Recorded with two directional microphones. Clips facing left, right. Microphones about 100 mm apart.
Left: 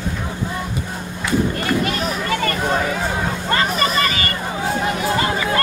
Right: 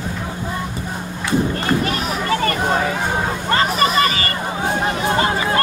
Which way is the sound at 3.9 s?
35° right (ahead or behind).